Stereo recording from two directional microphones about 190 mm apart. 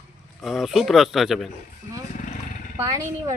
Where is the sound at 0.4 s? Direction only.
Centre (ahead or behind).